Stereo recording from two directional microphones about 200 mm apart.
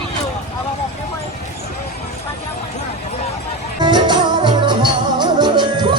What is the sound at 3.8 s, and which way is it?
Music, 20° right (ahead or behind).